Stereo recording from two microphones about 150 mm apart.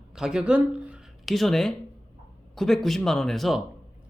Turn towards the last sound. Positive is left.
turn(degrees=0)  # may be behind; listen again after turning